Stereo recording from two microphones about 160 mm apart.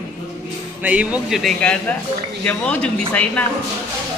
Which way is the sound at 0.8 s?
10° right (ahead or behind).